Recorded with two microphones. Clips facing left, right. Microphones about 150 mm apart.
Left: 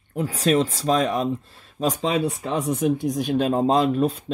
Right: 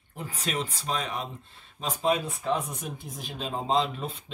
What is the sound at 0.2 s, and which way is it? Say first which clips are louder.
Speech: left 12 dB; 90° left.